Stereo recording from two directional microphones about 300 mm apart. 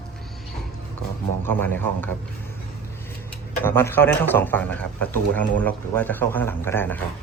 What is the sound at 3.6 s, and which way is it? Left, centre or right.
A man's voice, centre.